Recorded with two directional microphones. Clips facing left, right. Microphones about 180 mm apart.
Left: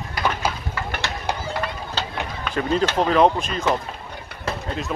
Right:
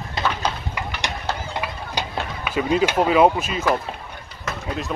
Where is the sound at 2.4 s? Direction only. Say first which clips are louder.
Right 2 dB; 10° right (ahead or behind).